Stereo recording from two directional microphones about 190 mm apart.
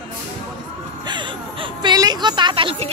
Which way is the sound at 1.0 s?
25° right (ahead or behind).